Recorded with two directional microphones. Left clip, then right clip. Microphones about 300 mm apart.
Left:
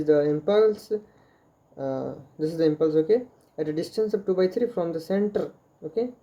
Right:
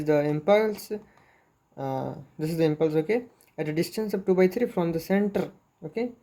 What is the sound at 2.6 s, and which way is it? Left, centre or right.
Speech, right.